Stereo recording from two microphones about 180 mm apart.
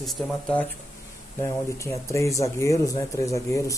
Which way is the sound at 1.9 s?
15° left (ahead or behind).